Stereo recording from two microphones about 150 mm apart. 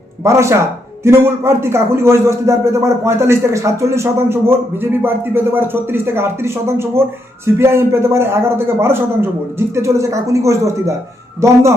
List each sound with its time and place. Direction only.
0.3 s a man's voice: 20° right (ahead or behind)